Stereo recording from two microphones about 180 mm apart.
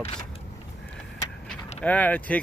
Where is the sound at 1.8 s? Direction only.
10° left (ahead or behind).